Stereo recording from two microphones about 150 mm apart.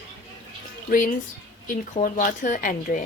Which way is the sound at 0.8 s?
60° left (ahead or behind).